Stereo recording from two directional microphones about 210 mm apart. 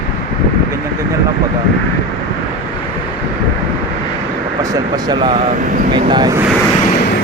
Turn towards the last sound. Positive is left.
turn(degrees=-20)  # may be behind; listen again after turning